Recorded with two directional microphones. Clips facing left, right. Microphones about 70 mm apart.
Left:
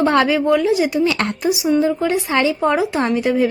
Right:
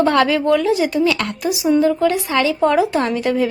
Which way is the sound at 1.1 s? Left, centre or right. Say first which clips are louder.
Left 2 dB; left.